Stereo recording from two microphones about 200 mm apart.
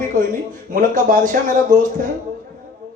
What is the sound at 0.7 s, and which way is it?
Speech, 40° right (ahead or behind).